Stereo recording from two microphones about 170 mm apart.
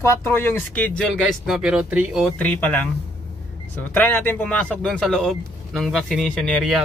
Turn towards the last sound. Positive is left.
turn(degrees=0)  # may be behind; listen again after turning